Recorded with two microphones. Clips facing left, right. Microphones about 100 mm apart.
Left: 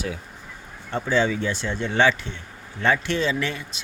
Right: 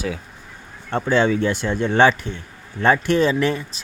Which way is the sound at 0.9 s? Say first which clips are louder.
Right 4 dB; 55° right (ahead or behind).